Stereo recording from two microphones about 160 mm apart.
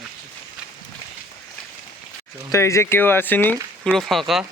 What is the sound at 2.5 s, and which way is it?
Speech, 20° left (ahead or behind).